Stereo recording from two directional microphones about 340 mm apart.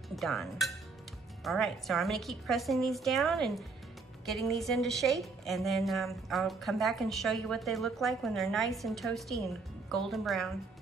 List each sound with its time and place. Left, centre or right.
0.1 s a woman's voice: centre